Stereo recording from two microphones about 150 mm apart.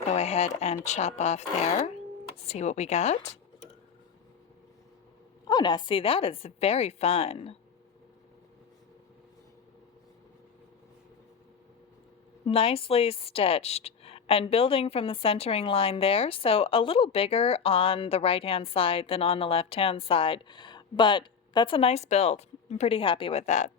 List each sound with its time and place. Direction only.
0.1 s speech: 45° left (ahead or behind)
5.5 s a woman's voice: 30° left (ahead or behind)
12.5 s a woman's voice: 40° left (ahead or behind)